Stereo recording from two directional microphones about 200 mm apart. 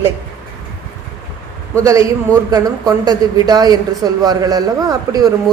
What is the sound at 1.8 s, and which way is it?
A man's voice, 15° right (ahead or behind).